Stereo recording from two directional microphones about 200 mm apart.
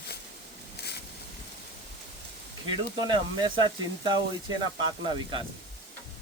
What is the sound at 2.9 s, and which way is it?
Speech, 20° right (ahead or behind).